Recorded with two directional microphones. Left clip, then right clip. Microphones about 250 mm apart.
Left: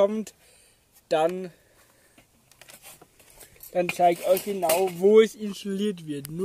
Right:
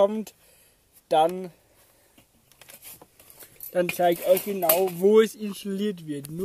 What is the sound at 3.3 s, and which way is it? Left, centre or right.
Speech, centre.